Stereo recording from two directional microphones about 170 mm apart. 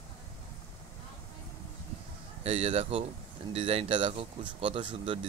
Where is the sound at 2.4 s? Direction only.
35° right (ahead or behind).